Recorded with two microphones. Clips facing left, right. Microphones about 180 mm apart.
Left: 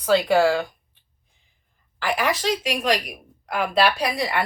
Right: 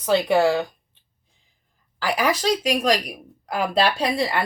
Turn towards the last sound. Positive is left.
turn(degrees=-25)  # may be behind; listen again after turning